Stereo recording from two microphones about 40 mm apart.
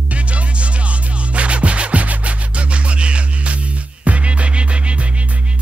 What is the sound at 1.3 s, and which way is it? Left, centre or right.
Music, right.